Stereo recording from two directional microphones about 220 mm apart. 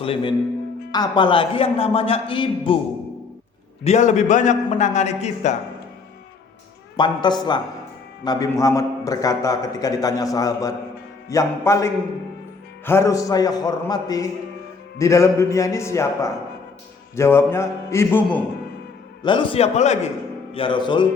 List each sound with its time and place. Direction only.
0.0 s a man's voice: 25° left (ahead or behind)
3.8 s a man's voice: 30° left (ahead or behind)
6.9 s a man's voice: 20° left (ahead or behind)
19.2 s a man's voice: 20° left (ahead or behind)